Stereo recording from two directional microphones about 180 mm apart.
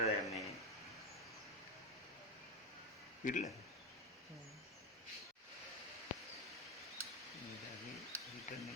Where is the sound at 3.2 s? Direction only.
45° left (ahead or behind).